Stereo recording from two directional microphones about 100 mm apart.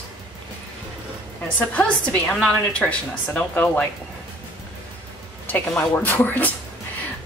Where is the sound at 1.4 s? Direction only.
15° left (ahead or behind).